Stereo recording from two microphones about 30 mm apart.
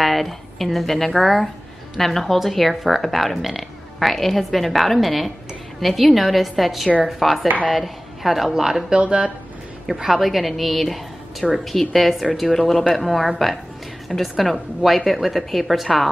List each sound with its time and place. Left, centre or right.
0.0 s a woman's voice: centre
8.9 s speech: right
10.0 s a woman's voice: centre